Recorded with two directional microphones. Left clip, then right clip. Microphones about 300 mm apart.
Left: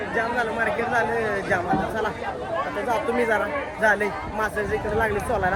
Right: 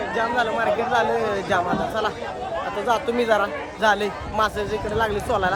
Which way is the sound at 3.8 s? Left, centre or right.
Centre.